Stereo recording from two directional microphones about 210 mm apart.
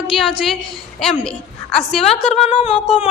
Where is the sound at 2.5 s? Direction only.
25° left (ahead or behind).